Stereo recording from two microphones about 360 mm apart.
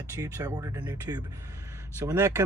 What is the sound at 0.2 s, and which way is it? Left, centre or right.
Speech, centre.